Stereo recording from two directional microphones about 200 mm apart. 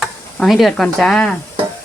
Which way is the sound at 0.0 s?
Centre (ahead or behind).